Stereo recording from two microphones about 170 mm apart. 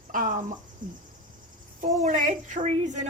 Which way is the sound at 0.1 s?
50° right (ahead or behind).